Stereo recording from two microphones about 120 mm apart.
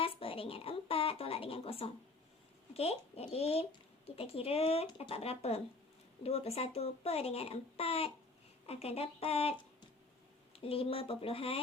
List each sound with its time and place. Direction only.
0.0 s a sound: 50° left (ahead or behind)
2.7 s speech: 55° left (ahead or behind)
10.6 s speech: 50° left (ahead or behind)